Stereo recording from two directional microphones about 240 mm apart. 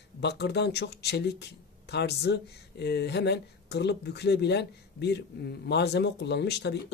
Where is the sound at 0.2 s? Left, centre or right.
Left.